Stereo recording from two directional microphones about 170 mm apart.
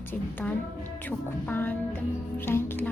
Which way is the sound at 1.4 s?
10° left (ahead or behind).